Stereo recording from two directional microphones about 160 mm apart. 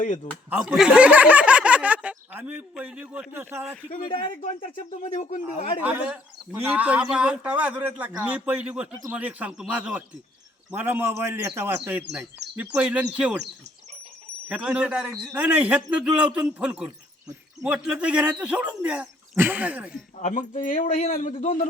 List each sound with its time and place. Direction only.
0.0 s speech: 50° left (ahead or behind)
0.5 s speech: 5° right (ahead or behind)
5.0 s speech: 35° left (ahead or behind)
5.8 s speech: 10° right (ahead or behind)
14.4 s speech: 5° right (ahead or behind)
20.1 s speech: 50° left (ahead or behind)